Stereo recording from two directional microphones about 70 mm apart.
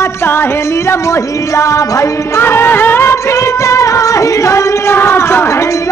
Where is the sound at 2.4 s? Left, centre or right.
Left.